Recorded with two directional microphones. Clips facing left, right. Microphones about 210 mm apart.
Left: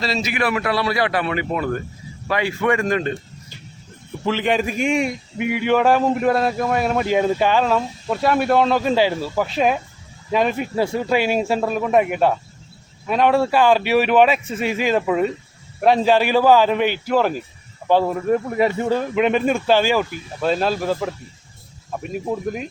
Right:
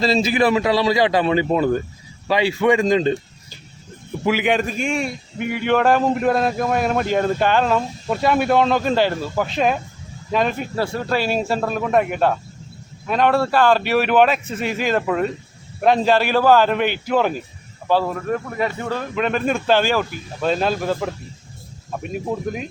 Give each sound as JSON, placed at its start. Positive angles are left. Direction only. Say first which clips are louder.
{"t": 0.0, "sound": "a man's voice", "louder": "right 5 dB", "side_deg": -30}
{"t": 2.6, "sound": "a man's voice", "louder": "right 4 dB", "side_deg": -20}
{"t": 4.2, "sound": "a man's voice", "louder": "right 2 dB", "side_deg": -10}
{"t": 4.5, "sound": "a man's voice", "louder": "left 2 dB", "side_deg": 10}
{"t": 17.8, "sound": "speech", "louder": "left 3 dB", "side_deg": 15}